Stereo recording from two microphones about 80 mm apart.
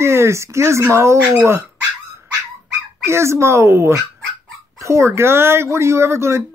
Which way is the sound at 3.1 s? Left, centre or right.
Right.